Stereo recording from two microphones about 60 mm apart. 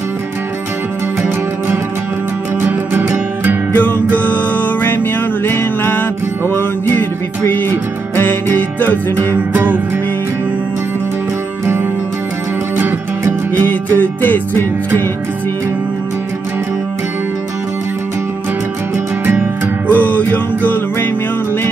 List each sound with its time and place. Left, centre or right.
2.6 s music: right
3.7 s music: left
9.3 s music: right
13.6 s music: left
19.9 s music: left